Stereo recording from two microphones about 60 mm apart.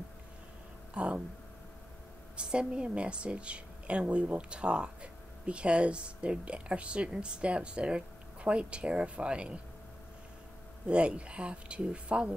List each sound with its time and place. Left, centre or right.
0.9 s speech: right
2.3 s a woman's voice: centre
10.9 s speech: centre